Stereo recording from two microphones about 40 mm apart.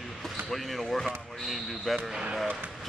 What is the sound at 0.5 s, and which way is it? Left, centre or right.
Speech, centre.